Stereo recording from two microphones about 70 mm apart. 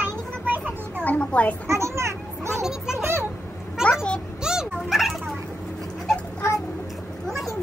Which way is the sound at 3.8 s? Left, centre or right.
Centre.